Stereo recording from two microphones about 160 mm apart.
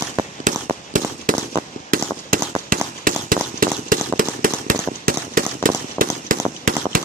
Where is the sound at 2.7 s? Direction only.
60° right (ahead or behind).